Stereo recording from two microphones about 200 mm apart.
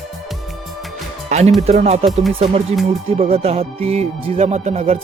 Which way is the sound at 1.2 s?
35° right (ahead or behind).